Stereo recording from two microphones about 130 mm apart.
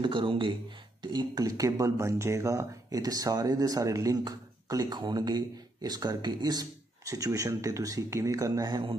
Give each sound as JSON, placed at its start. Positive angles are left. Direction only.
{"t": 0.0, "sound": "speech", "side_deg": -40}